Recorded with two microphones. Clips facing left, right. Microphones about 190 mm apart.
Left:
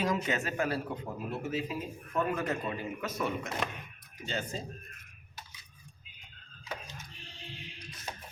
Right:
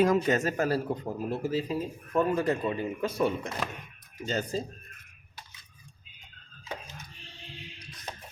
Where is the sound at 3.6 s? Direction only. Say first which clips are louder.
Right 1 dB; centre (ahead or behind).